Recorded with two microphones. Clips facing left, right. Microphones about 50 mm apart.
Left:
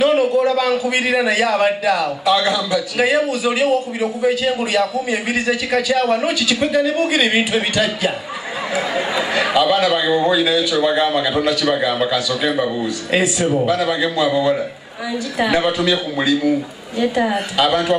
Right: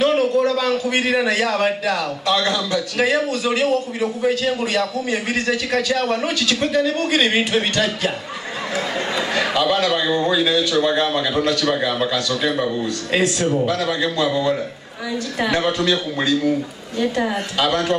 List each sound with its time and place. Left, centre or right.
0.0 s a man's voice: centre